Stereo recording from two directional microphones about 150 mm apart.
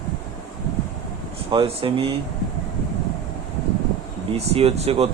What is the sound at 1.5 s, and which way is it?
Speech, 35° right (ahead or behind).